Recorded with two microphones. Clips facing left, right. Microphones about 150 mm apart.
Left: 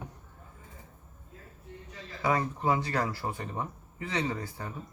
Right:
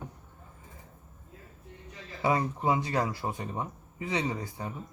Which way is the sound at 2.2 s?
20° right (ahead or behind).